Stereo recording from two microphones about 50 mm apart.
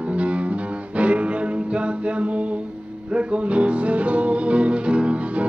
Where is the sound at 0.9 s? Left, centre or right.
Right.